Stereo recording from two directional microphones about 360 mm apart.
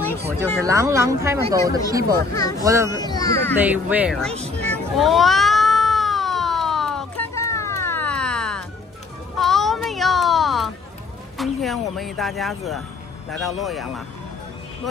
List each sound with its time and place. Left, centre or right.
0.6 s speech: centre
3.0 s speech: centre
3.6 s speech: centre
4.3 s speech: centre
4.6 s cat: centre
9.4 s a sound: centre
11.3 s speech: centre